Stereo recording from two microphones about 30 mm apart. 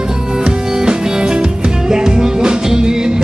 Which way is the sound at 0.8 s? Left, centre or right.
Right.